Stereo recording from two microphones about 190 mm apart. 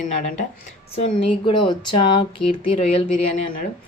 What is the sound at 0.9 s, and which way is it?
Speech, 30° left (ahead or behind).